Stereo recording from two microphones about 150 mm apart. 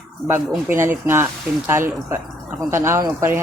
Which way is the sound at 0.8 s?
15° right (ahead or behind).